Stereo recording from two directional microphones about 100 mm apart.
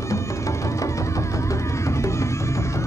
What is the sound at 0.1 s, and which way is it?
Music, 30° left (ahead or behind).